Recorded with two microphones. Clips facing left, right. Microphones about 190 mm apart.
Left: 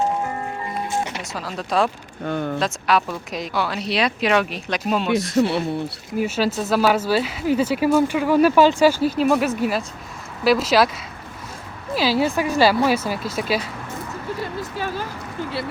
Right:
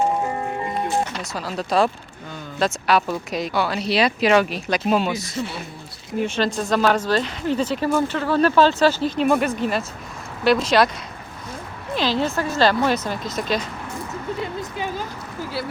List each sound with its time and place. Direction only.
1.2 s speech: centre (ahead or behind)
2.2 s speech: 65° left (ahead or behind)
2.6 s speech: centre (ahead or behind)
5.4 s speech: 70° left (ahead or behind)
6.1 s speech: 5° left (ahead or behind)
11.9 s speech: 10° left (ahead or behind)